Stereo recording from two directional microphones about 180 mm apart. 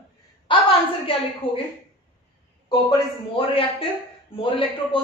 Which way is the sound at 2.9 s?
30° left (ahead or behind).